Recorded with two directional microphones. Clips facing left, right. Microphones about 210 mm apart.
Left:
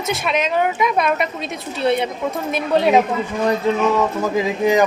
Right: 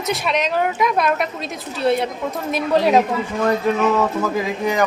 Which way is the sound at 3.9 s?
20° left (ahead or behind).